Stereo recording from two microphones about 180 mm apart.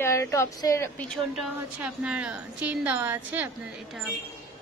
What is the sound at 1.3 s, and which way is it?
A woman's voice, 5° right (ahead or behind).